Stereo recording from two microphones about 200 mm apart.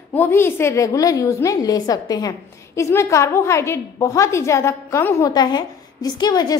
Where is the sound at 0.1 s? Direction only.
10° left (ahead or behind).